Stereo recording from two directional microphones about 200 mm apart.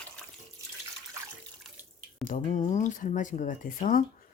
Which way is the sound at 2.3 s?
40° left (ahead or behind).